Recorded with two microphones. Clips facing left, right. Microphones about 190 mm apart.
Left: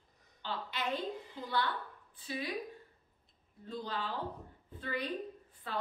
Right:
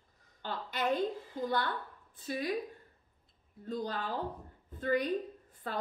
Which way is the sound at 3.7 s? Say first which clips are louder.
Right 3 dB; 45° right (ahead or behind).